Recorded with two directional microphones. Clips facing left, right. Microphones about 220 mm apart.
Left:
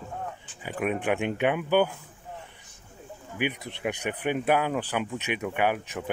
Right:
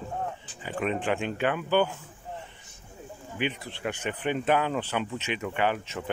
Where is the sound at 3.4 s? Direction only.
15° left (ahead or behind).